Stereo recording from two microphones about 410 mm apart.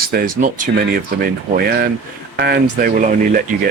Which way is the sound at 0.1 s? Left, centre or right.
Centre.